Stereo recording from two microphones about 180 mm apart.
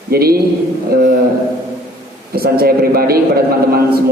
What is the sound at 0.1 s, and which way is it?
Speech, 60° right (ahead or behind).